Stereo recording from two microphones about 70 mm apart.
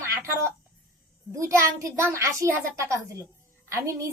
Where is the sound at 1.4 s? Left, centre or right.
Right.